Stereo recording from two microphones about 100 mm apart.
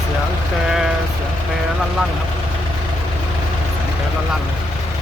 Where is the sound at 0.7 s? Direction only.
5° right (ahead or behind).